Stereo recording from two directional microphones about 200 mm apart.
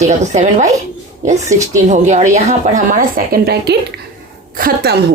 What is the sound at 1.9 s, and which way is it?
Speech, 35° right (ahead or behind).